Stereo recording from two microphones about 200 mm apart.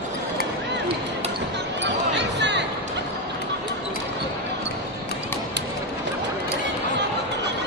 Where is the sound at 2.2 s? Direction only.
60° right (ahead or behind).